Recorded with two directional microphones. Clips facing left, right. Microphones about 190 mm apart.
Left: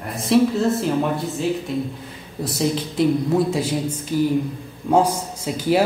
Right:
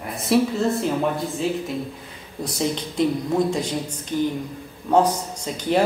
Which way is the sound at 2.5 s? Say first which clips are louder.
Left 3 dB; 5° left (ahead or behind).